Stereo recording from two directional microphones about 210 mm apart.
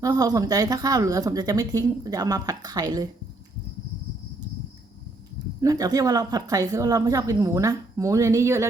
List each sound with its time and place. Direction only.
0.0 s speech: 15° right (ahead or behind)
5.5 s speech: 15° right (ahead or behind)